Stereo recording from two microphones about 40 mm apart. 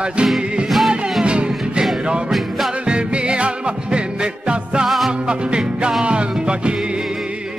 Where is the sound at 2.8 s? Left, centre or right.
Right.